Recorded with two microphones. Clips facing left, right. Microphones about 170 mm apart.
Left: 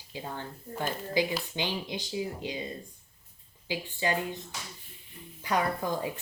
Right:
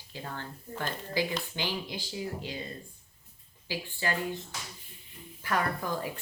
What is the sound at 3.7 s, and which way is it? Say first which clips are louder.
Speech: left 3 dB; 20° left (ahead or behind).